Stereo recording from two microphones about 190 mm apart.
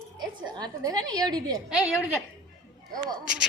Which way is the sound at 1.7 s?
5° right (ahead or behind).